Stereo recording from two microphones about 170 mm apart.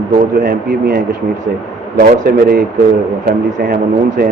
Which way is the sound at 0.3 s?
65° right (ahead or behind).